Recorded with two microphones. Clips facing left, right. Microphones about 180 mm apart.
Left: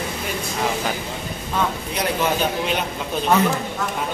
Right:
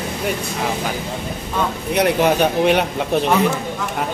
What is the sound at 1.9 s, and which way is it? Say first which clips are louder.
A man's voice: right 6 dB; 65° right (ahead or behind).